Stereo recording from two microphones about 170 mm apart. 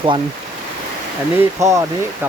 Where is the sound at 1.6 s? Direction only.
20° right (ahead or behind).